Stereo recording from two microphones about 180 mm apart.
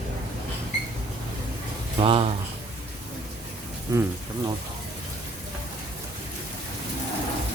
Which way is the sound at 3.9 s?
15° right (ahead or behind).